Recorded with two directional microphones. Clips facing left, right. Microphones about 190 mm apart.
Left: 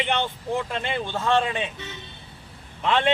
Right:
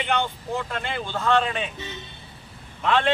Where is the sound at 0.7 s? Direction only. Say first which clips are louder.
Left 2 dB; 20° left (ahead or behind).